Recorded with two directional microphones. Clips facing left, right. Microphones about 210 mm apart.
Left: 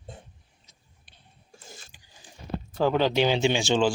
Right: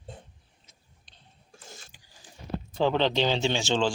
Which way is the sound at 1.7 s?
15° left (ahead or behind).